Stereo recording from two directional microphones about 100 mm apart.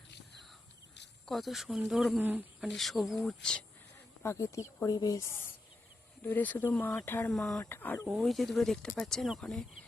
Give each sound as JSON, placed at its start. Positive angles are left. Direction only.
{"t": 1.3, "sound": "speech", "side_deg": 0}
{"t": 2.1, "sound": "speech", "side_deg": -20}
{"t": 2.6, "sound": "speech", "side_deg": 0}
{"t": 4.2, "sound": "speech", "side_deg": 30}
{"t": 6.2, "sound": "speech", "side_deg": 20}
{"t": 7.3, "sound": "speech", "side_deg": 5}
{"t": 7.6, "sound": "speech", "side_deg": 20}
{"t": 8.0, "sound": "speech", "side_deg": 0}